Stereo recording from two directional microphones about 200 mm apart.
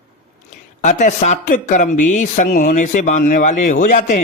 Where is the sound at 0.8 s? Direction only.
40° left (ahead or behind).